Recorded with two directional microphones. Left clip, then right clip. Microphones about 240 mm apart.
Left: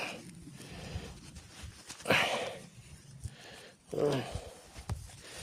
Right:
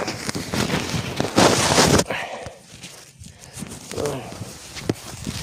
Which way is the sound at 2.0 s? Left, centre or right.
Centre.